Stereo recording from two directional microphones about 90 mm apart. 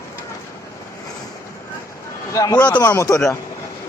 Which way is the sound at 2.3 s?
45° left (ahead or behind).